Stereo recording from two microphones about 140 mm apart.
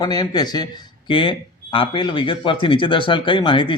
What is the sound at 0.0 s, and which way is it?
A man's voice, 30° left (ahead or behind).